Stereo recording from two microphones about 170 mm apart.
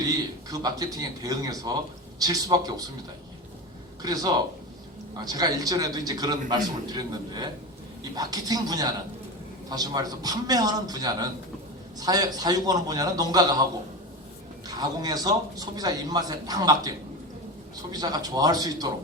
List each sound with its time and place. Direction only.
0.0 s a man's voice: 20° right (ahead or behind)
4.0 s a man's voice: 20° right (ahead or behind)
14.8 s a man's voice: 25° right (ahead or behind)
17.9 s a man's voice: 25° right (ahead or behind)